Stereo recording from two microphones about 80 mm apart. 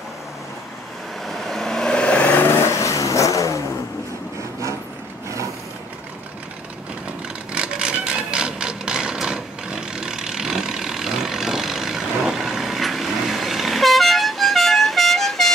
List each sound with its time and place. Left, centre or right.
1.2 s vehicle: centre; by 3.6 s left
7.5 s mechanisms: centre